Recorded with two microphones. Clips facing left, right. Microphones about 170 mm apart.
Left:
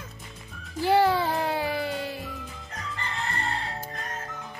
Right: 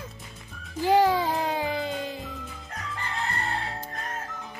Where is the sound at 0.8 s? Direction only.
15° right (ahead or behind).